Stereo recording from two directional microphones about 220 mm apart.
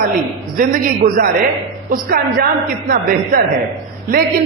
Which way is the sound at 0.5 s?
40° right (ahead or behind).